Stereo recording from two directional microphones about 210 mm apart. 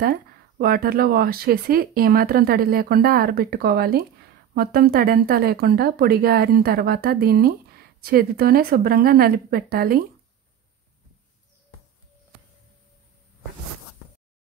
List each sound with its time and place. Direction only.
0.0 s speech: 45° right (ahead or behind)